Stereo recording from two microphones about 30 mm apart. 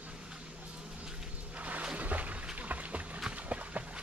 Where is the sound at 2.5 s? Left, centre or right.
Right.